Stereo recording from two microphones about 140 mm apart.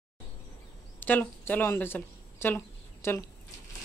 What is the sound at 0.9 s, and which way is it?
Speech, 15° left (ahead or behind).